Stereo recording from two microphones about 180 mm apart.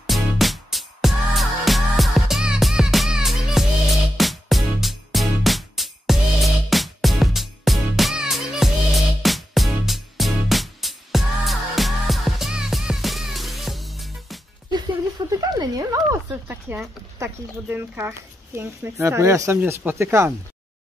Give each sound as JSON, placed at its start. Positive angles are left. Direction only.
{"t": 0.0, "sound": "music", "side_deg": 0}
{"t": 15.2, "sound": "a sound", "side_deg": -20}
{"t": 15.5, "sound": "speech", "side_deg": -20}